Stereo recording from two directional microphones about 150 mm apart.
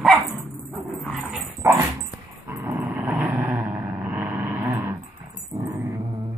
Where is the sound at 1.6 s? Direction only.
20° right (ahead or behind).